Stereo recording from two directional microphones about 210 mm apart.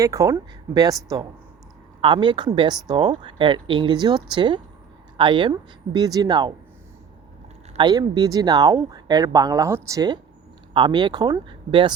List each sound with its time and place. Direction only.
0.0 s speech: 15° right (ahead or behind)
2.0 s speech: 25° right (ahead or behind)
7.7 s speech: 20° right (ahead or behind)